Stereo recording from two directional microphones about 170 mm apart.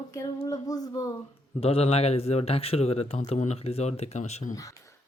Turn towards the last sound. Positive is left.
turn(degrees=45)  # may be behind; listen again after turning